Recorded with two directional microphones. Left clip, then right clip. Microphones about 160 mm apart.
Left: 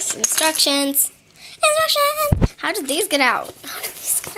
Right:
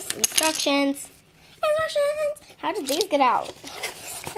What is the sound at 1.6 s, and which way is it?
Speech, 5° left (ahead or behind).